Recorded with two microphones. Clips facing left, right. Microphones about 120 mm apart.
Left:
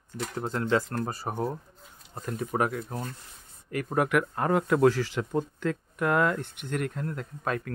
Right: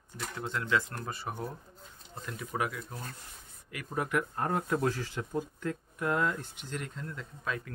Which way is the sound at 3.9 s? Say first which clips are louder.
Left 6 dB; 80° left.